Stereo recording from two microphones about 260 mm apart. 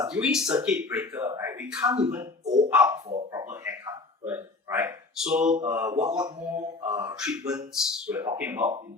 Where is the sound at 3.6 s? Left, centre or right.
Centre.